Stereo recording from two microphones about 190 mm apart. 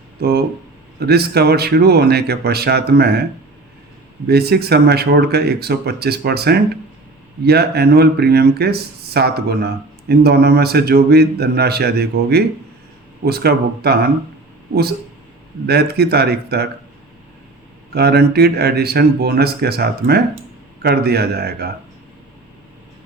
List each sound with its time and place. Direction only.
0.2 s speech: 55° right (ahead or behind)
4.3 s speech: 55° right (ahead or behind)
15.6 s speech: 60° right (ahead or behind)
17.9 s speech: 55° right (ahead or behind)